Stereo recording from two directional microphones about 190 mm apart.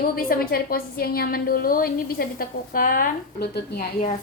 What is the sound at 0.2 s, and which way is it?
A woman's voice, 50° left (ahead or behind).